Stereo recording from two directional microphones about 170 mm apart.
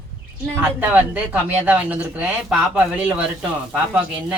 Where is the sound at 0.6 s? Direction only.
10° right (ahead or behind).